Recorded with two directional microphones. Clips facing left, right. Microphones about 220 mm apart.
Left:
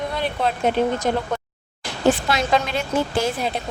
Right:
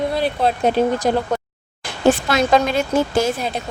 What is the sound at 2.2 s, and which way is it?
A woman's voice, 45° right (ahead or behind).